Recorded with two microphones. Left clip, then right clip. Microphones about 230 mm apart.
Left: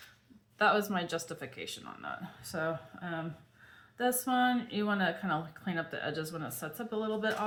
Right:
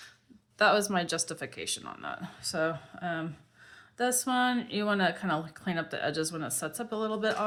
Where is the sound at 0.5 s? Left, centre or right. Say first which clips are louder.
Right 3 dB; right.